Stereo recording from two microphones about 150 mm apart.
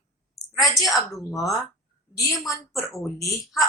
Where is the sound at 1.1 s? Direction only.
20° left (ahead or behind).